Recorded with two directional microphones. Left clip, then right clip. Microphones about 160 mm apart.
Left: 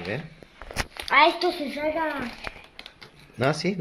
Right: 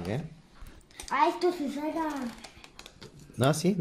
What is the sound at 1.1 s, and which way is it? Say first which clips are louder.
Speech: left 8 dB; 30° left (ahead or behind).